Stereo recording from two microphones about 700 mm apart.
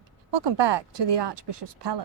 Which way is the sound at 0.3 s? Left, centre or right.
Right.